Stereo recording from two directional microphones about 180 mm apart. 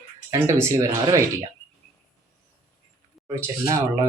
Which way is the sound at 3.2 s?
20° right (ahead or behind).